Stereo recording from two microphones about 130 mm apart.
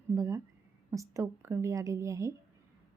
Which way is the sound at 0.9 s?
25° right (ahead or behind).